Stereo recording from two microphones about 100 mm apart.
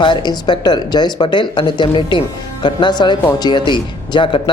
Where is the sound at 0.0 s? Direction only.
50° left (ahead or behind).